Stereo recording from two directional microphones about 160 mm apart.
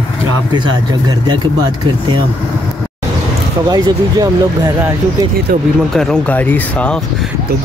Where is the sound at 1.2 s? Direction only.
25° right (ahead or behind).